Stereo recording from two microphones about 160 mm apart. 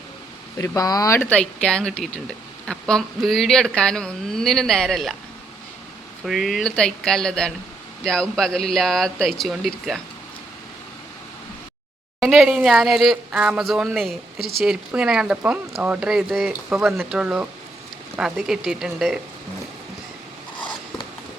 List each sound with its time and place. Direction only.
0.6 s speech: 20° left (ahead or behind); by 5.1 s centre (ahead or behind)
6.2 s speech: centre (ahead or behind)
12.2 s speech: 5° right (ahead or behind)